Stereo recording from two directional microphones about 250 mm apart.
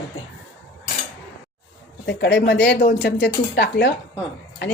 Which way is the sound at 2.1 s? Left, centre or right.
Left.